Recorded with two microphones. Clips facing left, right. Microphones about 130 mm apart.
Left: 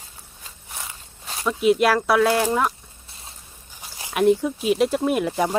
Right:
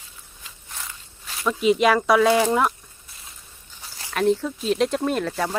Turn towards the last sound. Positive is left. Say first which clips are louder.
# left 3 dB
turn(degrees=15)  # may be behind; listen again after turning